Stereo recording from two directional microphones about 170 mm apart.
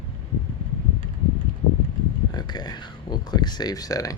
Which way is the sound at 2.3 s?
25° left (ahead or behind).